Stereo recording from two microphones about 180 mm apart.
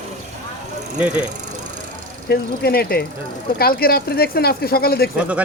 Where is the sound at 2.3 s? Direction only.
60° left (ahead or behind).